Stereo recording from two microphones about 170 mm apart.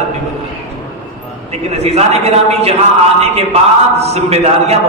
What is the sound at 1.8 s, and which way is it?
A man's voice, 40° right (ahead or behind).